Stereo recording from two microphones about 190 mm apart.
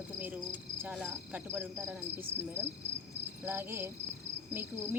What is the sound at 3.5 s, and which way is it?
Cricket, 10° right (ahead or behind).